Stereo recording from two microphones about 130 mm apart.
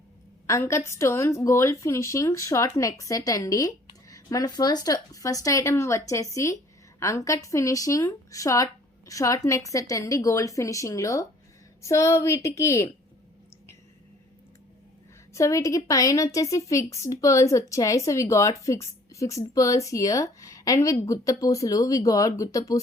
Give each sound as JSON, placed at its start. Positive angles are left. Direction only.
{"t": 0.4, "sound": "a woman's voice", "side_deg": 20}
{"t": 15.3, "sound": "a woman's voice", "side_deg": 25}